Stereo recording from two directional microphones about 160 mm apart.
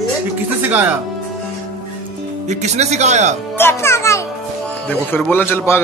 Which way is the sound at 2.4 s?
45° right (ahead or behind).